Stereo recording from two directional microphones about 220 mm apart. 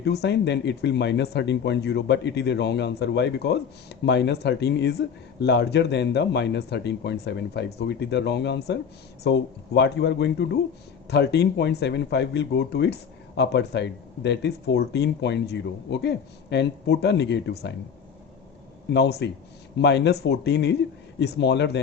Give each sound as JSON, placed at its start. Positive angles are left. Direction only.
{"t": 0.0, "sound": "speech", "side_deg": 50}
{"t": 18.9, "sound": "speech", "side_deg": 50}